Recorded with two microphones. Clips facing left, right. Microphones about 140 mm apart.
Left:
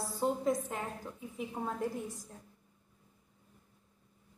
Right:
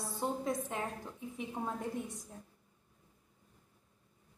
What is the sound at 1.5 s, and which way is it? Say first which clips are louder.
Speech: left 2 dB; centre (ahead or behind).